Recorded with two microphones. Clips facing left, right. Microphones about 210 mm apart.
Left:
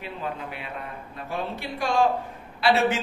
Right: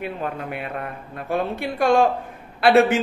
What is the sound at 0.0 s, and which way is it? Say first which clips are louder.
A man's voice: right 5 dB; 55° right (ahead or behind).